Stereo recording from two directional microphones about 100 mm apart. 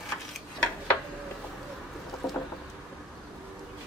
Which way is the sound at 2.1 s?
Centre (ahead or behind).